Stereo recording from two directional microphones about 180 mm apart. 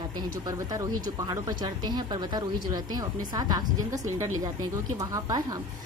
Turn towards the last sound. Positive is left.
turn(degrees=-20)  # may be behind; listen again after turning